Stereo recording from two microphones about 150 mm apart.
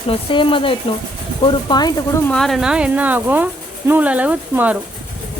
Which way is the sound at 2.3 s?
Centre (ahead or behind).